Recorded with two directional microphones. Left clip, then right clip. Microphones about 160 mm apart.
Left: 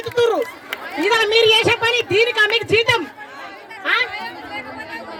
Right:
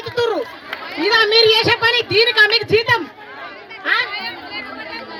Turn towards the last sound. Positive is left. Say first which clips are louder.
# right 2 dB
turn(degrees=90)